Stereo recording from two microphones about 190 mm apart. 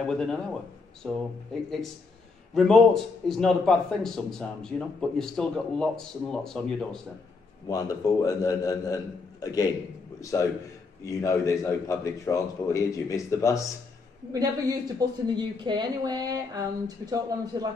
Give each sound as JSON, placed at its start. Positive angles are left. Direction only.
{"t": 0.0, "sound": "a man's voice", "side_deg": 5}
{"t": 7.6, "sound": "a man's voice", "side_deg": 20}
{"t": 15.0, "sound": "a woman's voice", "side_deg": -20}